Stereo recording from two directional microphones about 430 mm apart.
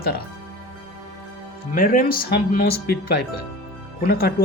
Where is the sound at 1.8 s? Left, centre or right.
Centre.